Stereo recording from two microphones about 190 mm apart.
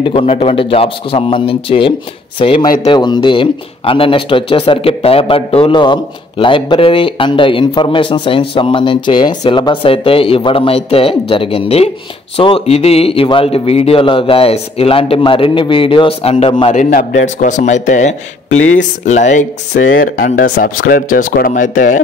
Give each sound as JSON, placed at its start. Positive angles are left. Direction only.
{"t": 0.0, "sound": "speech", "side_deg": 30}
{"t": 16.7, "sound": "speech", "side_deg": 40}
{"t": 19.7, "sound": "speech", "side_deg": 85}
{"t": 20.0, "sound": "speech", "side_deg": 45}